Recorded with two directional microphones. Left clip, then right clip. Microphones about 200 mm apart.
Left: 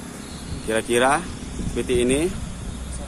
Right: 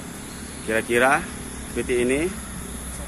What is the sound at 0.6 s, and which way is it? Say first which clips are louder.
Speech: even; 10° left (ahead or behind).